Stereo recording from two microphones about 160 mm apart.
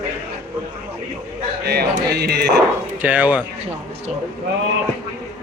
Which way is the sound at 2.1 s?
90° right.